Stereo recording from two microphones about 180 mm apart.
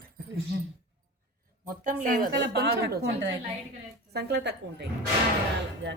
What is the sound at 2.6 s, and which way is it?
A woman's voice, 75° right (ahead or behind).